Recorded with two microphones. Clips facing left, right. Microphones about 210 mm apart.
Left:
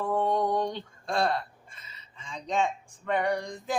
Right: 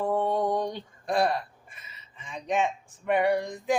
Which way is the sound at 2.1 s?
20° right (ahead or behind).